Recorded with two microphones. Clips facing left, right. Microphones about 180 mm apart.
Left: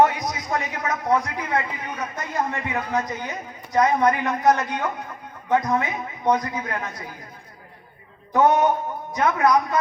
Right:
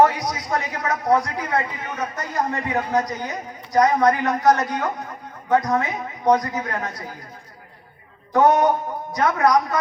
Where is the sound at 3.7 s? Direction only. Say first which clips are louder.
Right 2 dB; 35° right (ahead or behind).